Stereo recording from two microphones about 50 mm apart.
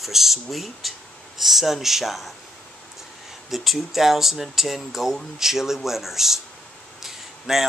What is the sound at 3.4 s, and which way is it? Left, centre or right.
Speech, centre.